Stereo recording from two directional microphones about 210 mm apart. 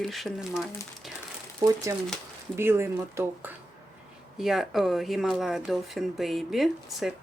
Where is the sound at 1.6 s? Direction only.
15° right (ahead or behind).